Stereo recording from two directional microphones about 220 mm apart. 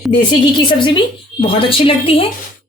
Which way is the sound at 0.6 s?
20° left (ahead or behind).